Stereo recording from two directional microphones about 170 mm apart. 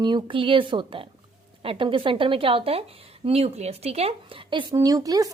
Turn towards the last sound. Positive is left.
turn(degrees=-20)  # may be behind; listen again after turning